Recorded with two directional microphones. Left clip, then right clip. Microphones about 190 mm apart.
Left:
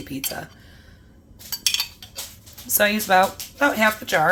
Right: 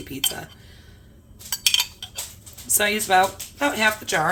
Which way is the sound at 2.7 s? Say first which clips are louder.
Left 1 dB; 20° left (ahead or behind).